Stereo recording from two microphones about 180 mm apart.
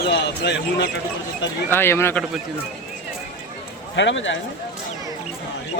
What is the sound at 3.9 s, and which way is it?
Speech, 90° left.